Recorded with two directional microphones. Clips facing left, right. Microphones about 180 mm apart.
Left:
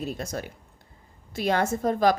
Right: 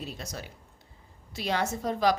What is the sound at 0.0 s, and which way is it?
A woman's voice, 50° left (ahead or behind).